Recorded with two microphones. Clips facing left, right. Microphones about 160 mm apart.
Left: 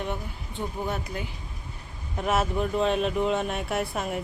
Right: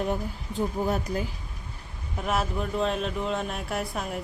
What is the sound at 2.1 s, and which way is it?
Speech, centre (ahead or behind).